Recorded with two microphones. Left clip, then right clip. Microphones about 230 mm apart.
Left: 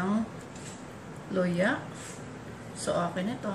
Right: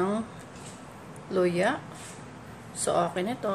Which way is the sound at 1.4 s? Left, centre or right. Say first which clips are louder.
Right 3 dB; right.